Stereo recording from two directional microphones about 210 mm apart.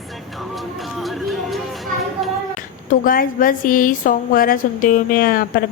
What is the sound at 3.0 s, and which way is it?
A woman's voice, 40° left (ahead or behind).